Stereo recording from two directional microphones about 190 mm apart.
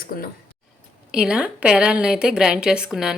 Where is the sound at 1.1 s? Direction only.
5° right (ahead or behind).